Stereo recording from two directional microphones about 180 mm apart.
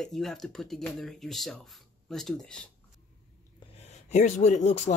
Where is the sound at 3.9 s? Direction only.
40° left (ahead or behind).